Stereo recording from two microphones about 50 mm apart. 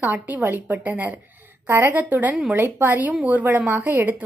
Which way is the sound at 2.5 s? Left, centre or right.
Right.